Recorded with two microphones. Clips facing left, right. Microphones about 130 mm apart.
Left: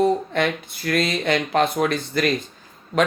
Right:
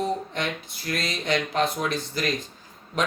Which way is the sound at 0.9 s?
60° left (ahead or behind).